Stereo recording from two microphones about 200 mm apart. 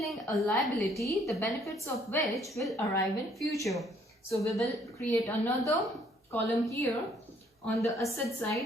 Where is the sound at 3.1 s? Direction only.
Centre (ahead or behind).